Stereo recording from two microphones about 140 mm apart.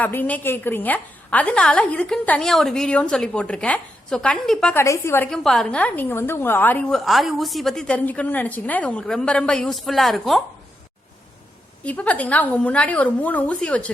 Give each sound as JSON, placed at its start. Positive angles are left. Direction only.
{"t": 0.0, "sound": "a woman's voice", "side_deg": 10}
{"t": 4.7, "sound": "a woman's voice", "side_deg": 20}
{"t": 5.3, "sound": "a woman's voice", "side_deg": 5}
{"t": 6.9, "sound": "a woman's voice", "side_deg": 0}
{"t": 11.8, "sound": "a woman's voice", "side_deg": 10}